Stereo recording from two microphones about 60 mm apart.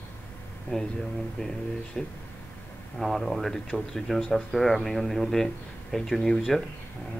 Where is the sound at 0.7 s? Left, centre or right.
Centre.